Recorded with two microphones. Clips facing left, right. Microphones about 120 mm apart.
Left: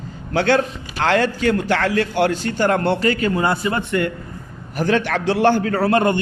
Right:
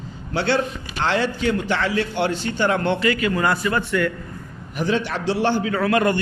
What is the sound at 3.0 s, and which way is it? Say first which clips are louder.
Speech: left 2 dB; 35° left (ahead or behind).